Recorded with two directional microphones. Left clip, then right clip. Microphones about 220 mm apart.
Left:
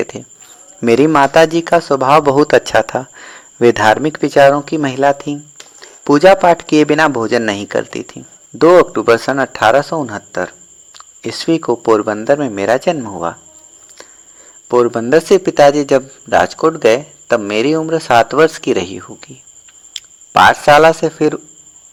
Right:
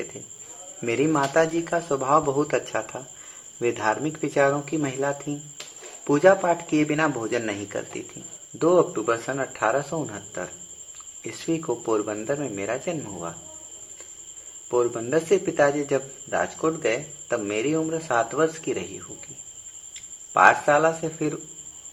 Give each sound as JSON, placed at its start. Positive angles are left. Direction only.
{"t": 0.8, "sound": "a man's voice", "side_deg": 35}
{"t": 14.7, "sound": "a man's voice", "side_deg": 40}
{"t": 20.3, "sound": "a man's voice", "side_deg": 45}